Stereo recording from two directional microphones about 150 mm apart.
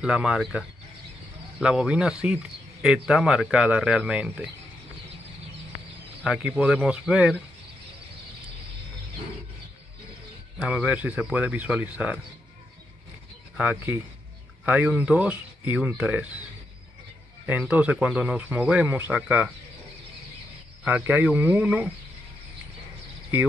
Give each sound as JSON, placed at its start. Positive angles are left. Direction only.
{"t": 0.0, "sound": "speech", "side_deg": -5}
{"t": 6.2, "sound": "speech", "side_deg": -5}
{"t": 10.6, "sound": "speech", "side_deg": -5}
{"t": 13.6, "sound": "speech", "side_deg": -10}
{"t": 17.5, "sound": "speech", "side_deg": -10}
{"t": 20.8, "sound": "speech", "side_deg": -15}